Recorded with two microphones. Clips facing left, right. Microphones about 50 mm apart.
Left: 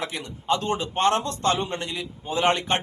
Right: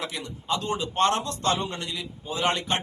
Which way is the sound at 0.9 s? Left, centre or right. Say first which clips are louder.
Left 1 dB; left.